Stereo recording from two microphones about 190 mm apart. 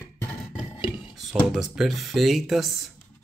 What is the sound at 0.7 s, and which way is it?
Beatboxing, 25° left (ahead or behind).